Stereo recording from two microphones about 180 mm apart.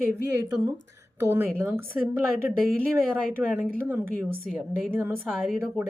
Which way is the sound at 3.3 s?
10° right (ahead or behind).